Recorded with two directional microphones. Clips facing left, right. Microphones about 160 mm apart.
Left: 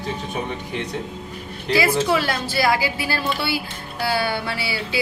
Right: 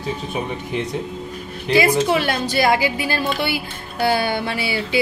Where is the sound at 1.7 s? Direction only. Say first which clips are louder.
Right 3 dB; 20° right (ahead or behind).